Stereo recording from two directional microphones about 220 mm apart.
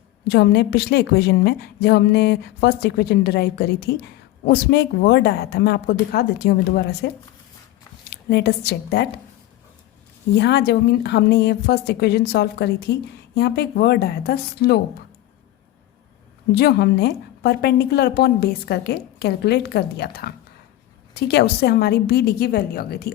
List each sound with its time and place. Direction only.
0.3 s a woman's voice: 50° left (ahead or behind)
8.1 s a woman's voice: 50° left (ahead or behind)
10.3 s a woman's voice: 50° left (ahead or behind)
16.6 s a woman's voice: 45° left (ahead or behind)